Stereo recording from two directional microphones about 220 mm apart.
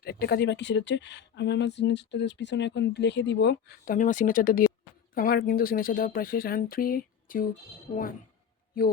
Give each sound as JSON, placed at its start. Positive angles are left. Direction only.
{"t": 0.0, "sound": "speech", "side_deg": 45}
{"t": 3.9, "sound": "speech", "side_deg": 35}
{"t": 7.9, "sound": "speech", "side_deg": 30}